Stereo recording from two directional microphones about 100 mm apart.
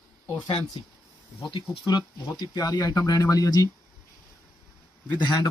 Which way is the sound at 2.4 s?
40° left (ahead or behind).